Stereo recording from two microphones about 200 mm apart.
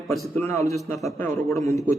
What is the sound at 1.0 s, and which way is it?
Speech, centre (ahead or behind).